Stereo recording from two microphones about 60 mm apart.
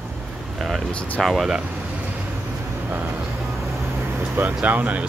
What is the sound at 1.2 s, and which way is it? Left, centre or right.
Speech, centre.